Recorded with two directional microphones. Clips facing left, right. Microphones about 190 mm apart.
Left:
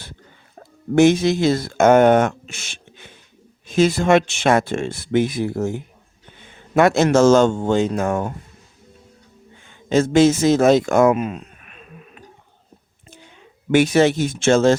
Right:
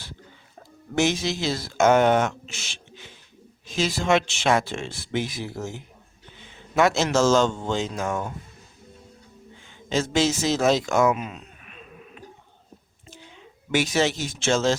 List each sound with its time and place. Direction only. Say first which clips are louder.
0.9 s a man's voice: left 10 dB; 55° left (ahead or behind)
9.6 s speech: left 8 dB; 55° left (ahead or behind)
13.7 s speech: left 8 dB; 55° left (ahead or behind)